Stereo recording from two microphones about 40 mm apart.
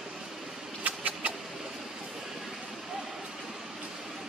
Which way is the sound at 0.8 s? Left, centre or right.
Right.